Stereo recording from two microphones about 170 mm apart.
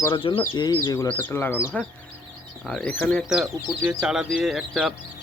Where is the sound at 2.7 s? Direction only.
5° left (ahead or behind).